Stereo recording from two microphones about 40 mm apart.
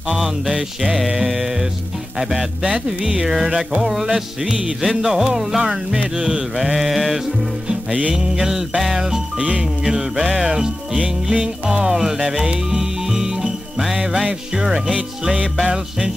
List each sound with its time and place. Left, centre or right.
0.8 s music: centre
6.1 s music: right
6.5 s mantra: centre
8.1 s music: centre
9.4 s music: right
9.8 s music: centre
11.9 s music: centre